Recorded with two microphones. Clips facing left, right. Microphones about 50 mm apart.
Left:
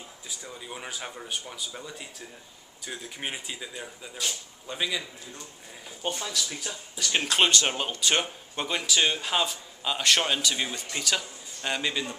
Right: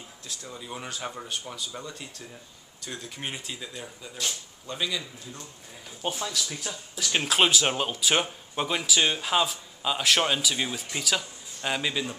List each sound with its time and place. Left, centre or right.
0.3 s speech: centre